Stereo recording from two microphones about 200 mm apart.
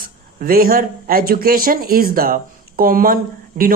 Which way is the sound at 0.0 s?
45° right (ahead or behind).